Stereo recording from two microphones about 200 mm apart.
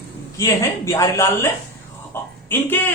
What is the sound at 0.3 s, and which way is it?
A man's voice, 15° left (ahead or behind).